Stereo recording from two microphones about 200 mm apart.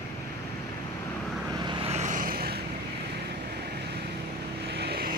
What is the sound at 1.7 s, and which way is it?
Vehicle, 30° right (ahead or behind).